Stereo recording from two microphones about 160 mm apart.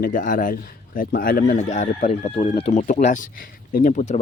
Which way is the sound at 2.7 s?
50° left (ahead or behind).